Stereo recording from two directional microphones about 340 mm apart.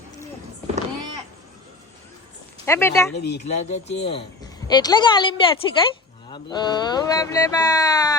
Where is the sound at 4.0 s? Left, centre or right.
Centre.